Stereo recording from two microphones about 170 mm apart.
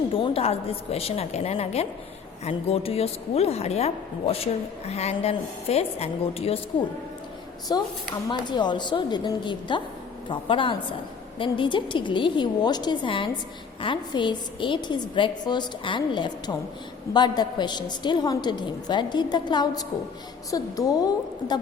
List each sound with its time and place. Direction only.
0.1 s a woman's voice: 35° left (ahead or behind)
7.7 s a woman's voice: 25° left (ahead or behind)